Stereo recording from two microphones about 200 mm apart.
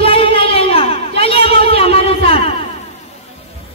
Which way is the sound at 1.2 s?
30° left (ahead or behind).